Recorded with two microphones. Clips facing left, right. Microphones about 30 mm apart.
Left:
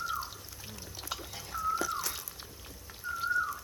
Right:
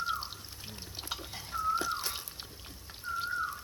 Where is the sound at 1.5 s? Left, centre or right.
Right.